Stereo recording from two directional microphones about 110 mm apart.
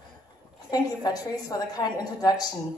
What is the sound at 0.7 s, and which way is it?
A woman's voice, 35° left (ahead or behind).